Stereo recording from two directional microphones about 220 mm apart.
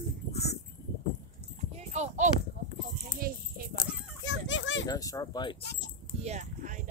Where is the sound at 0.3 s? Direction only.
30° left (ahead or behind).